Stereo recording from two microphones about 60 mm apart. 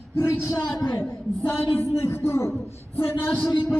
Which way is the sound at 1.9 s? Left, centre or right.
Left.